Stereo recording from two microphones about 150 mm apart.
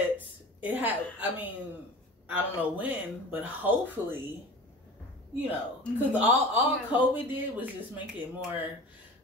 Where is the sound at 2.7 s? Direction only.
10° right (ahead or behind).